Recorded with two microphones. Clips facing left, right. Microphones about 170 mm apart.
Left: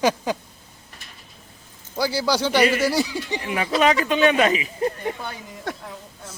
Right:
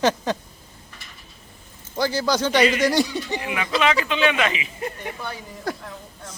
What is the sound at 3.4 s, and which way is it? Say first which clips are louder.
Speech: left 3 dB; 40° left (ahead or behind).